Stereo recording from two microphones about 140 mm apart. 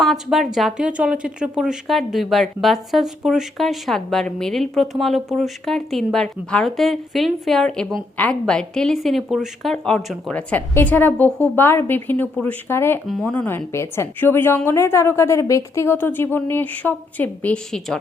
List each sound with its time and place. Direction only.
0.0 s a woman's voice: centre (ahead or behind); by 13.0 s 15° left (ahead or behind)
13.1 s a woman's voice: 5° left (ahead or behind)